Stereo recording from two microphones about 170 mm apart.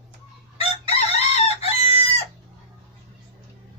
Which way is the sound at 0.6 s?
35° left (ahead or behind).